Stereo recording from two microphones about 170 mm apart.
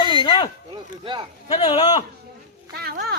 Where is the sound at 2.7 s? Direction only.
65° right (ahead or behind).